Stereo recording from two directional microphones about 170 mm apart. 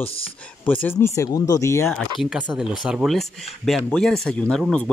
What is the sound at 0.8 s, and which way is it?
Speech, 15° left (ahead or behind).